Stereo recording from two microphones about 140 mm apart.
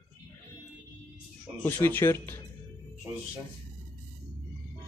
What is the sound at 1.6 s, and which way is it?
Speech, 15° left (ahead or behind).